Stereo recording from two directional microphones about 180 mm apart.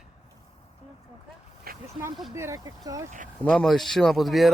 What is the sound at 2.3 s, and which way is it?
Speech, 15° right (ahead or behind).